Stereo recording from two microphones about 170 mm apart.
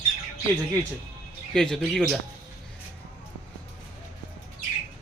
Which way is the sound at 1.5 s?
5° left (ahead or behind).